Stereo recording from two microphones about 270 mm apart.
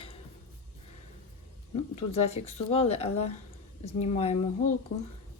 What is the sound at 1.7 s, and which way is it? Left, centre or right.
Speech, left.